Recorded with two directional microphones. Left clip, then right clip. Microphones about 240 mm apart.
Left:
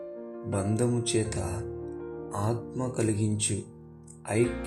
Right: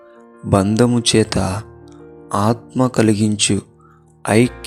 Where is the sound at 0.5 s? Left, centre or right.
Right.